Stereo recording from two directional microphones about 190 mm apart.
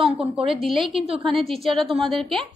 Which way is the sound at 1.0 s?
30° right (ahead or behind).